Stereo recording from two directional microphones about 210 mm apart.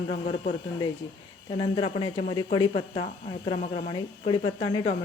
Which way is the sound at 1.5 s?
20° left (ahead or behind).